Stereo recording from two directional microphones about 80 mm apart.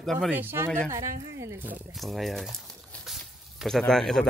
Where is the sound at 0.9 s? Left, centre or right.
Right.